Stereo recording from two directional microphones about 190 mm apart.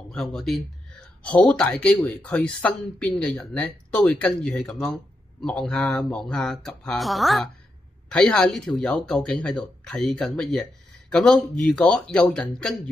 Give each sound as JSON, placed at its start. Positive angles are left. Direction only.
{"t": 0.1, "sound": "speech", "side_deg": 0}